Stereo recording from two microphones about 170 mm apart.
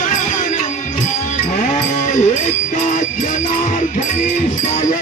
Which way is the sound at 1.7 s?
45° left (ahead or behind).